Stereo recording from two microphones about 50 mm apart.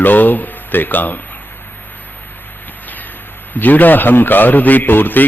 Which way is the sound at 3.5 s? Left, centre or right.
Left.